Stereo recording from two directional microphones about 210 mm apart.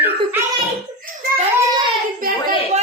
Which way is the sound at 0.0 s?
10° right (ahead or behind).